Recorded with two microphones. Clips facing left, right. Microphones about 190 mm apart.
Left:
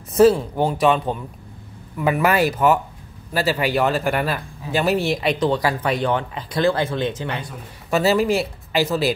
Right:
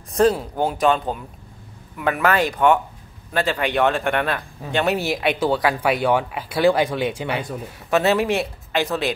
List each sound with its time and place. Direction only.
0.1 s speech: centre (ahead or behind)
7.9 s speech: centre (ahead or behind)